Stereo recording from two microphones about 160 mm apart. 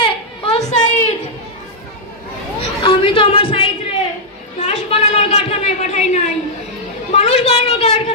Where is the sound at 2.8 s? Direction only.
35° left (ahead or behind).